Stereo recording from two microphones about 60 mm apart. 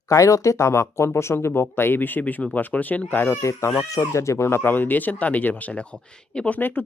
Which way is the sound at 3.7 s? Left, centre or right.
Left.